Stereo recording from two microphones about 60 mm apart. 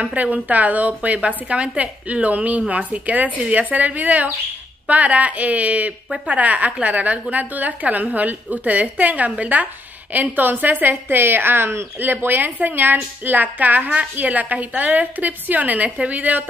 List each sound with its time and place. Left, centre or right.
0.0 s a woman's voice: right